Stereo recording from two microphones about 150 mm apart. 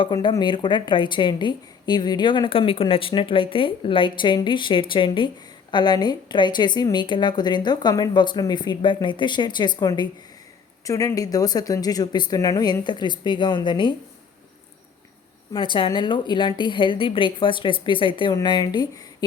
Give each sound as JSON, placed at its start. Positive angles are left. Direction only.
{"t": 0.0, "sound": "speech", "side_deg": 30}
{"t": 15.5, "sound": "speech", "side_deg": 35}